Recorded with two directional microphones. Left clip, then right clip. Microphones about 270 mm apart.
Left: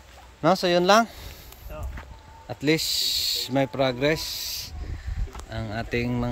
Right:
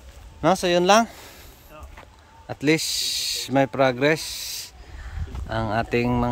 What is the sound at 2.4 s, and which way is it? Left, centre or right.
Speech, centre.